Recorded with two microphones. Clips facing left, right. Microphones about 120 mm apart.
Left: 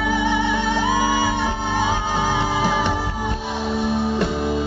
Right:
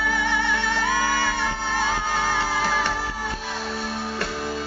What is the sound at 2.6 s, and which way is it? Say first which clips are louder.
Music: left 4 dB; 20° left (ahead or behind).